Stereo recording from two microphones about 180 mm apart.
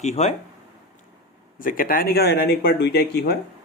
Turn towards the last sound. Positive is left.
turn(degrees=65)  # may be behind; listen again after turning